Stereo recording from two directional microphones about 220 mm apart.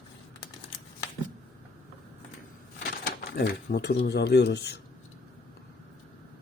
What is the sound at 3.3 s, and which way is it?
Speech, 50° left (ahead or behind).